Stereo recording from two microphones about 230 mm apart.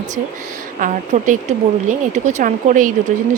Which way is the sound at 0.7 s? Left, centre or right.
Right.